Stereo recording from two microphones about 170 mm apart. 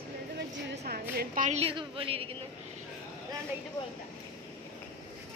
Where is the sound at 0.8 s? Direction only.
60° right (ahead or behind).